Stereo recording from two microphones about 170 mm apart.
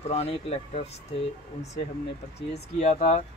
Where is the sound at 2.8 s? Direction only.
40° left (ahead or behind).